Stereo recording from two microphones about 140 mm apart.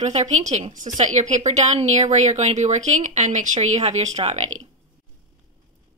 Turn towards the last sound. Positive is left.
turn(degrees=-55)  # may be behind; listen again after turning